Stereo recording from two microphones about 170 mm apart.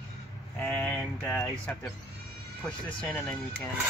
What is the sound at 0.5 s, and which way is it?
Speech, 10° left (ahead or behind).